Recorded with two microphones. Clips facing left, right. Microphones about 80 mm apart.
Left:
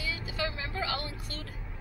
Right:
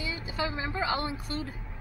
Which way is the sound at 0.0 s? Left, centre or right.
Right.